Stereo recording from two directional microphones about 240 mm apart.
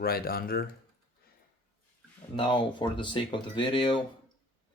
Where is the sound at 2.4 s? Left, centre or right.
Centre.